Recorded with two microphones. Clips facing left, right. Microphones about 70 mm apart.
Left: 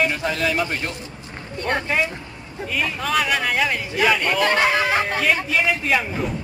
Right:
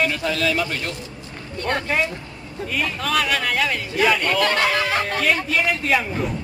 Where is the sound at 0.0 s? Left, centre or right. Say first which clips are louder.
Even; left; by 6.3 s centre.